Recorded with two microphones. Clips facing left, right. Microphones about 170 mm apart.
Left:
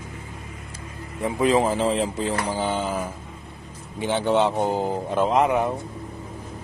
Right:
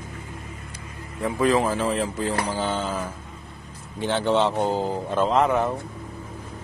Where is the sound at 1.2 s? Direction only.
20° left (ahead or behind).